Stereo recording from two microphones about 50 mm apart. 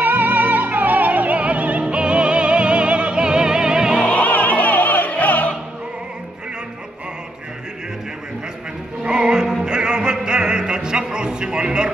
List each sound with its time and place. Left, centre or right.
0.0 s music: right; by 4.0 s centre
4.1 s music: left
9.0 s music: centre